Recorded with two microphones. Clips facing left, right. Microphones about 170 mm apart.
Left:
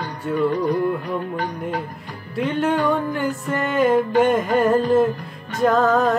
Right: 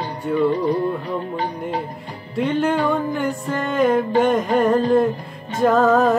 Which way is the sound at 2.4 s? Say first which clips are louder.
Right 1 dB; centre (ahead or behind).